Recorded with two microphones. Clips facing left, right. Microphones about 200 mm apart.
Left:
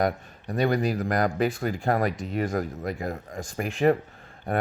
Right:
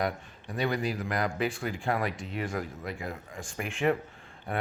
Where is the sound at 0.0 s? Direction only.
40° left (ahead or behind).